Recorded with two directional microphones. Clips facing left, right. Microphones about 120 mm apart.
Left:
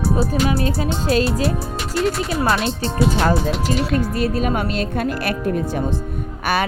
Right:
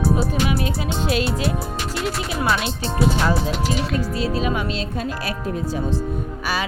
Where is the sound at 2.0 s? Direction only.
Centre (ahead or behind).